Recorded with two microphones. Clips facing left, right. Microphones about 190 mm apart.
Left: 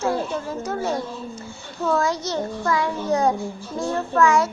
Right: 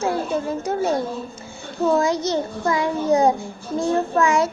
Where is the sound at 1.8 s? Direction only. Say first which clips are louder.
Right 3 dB; 20° right (ahead or behind).